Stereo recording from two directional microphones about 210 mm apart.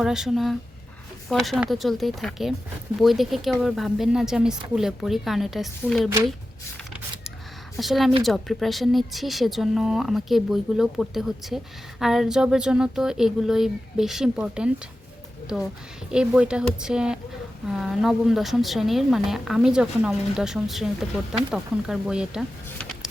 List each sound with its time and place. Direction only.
0.0 s speech: centre (ahead or behind)
6.1 s speech: 15° right (ahead or behind)
7.8 s speech: centre (ahead or behind)